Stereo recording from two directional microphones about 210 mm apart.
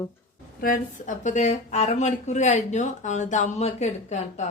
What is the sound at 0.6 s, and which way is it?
Speech, 40° left (ahead or behind).